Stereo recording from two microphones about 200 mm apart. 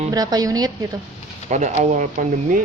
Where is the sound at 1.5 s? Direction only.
35° right (ahead or behind).